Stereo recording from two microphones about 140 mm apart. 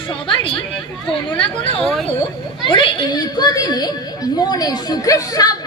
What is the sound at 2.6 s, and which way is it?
A child's voice, 35° left (ahead or behind).